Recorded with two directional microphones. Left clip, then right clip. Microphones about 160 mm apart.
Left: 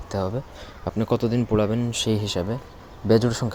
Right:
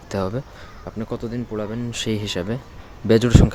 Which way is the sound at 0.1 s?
20° right (ahead or behind).